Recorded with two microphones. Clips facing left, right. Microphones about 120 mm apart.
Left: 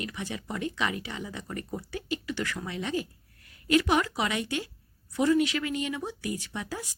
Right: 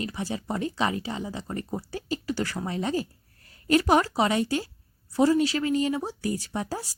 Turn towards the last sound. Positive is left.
turn(degrees=-35)  # may be behind; listen again after turning